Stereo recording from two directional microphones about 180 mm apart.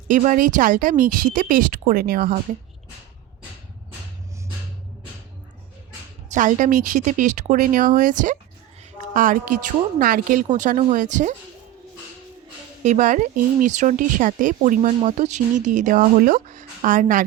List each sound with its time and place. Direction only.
0.1 s speech: 45° right (ahead or behind)
6.3 s speech: 45° right (ahead or behind)
12.8 s speech: 45° right (ahead or behind)